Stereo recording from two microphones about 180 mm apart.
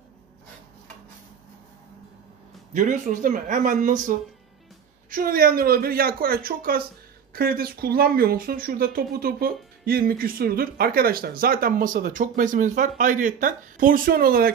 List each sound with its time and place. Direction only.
2.7 s speech: 45° right (ahead or behind)
5.1 s speech: 55° right (ahead or behind)